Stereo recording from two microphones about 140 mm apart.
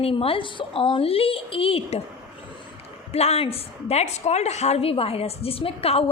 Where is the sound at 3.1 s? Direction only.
45° left (ahead or behind).